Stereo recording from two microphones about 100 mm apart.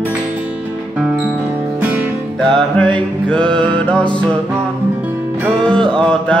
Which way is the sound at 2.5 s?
10° left (ahead or behind).